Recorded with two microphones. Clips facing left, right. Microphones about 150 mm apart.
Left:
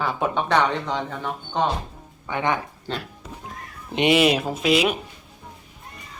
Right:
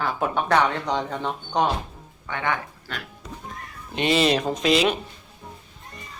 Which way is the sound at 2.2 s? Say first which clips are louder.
Left 3 dB; 15° left (ahead or behind).